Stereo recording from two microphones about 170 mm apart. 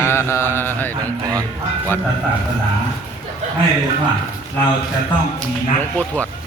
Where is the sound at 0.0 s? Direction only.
15° left (ahead or behind).